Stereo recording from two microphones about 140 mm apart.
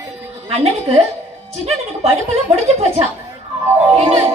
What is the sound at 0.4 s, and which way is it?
A woman's voice, 45° right (ahead or behind).